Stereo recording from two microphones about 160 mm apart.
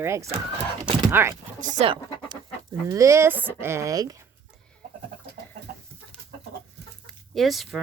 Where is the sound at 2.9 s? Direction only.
20° right (ahead or behind).